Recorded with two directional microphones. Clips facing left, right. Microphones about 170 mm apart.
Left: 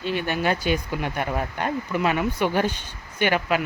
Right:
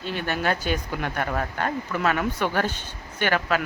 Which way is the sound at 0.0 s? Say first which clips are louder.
Left 4 dB; 45° right (ahead or behind).